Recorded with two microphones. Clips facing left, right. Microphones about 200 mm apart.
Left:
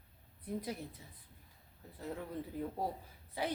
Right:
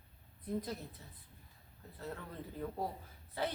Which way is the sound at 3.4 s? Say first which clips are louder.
Even; 15° left (ahead or behind).